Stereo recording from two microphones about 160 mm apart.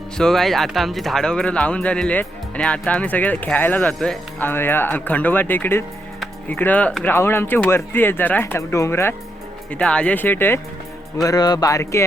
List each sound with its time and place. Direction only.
0.2 s speech: centre (ahead or behind)
11.2 s speech: 25° left (ahead or behind)